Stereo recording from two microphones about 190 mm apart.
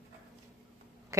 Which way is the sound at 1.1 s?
15° right (ahead or behind).